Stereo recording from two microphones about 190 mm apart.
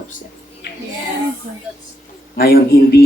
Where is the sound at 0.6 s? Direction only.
55° left (ahead or behind).